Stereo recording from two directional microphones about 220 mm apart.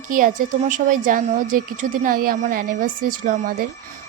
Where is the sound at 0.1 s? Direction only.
35° right (ahead or behind).